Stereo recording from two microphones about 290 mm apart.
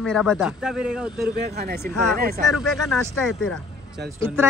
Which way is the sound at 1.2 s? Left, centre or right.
Right.